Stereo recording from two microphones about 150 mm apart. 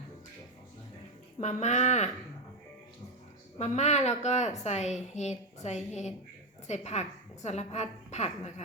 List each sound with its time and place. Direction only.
1.4 s a woman's voice: 50° left (ahead or behind)
3.6 s a woman's voice: 50° left (ahead or behind)